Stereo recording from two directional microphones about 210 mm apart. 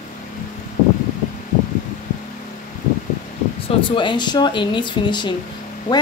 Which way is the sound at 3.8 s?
25° left (ahead or behind).